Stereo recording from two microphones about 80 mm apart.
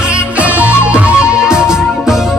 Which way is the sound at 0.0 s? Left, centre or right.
Centre.